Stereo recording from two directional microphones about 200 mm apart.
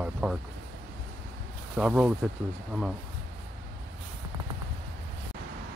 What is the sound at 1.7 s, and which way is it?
Speech, 5° right (ahead or behind).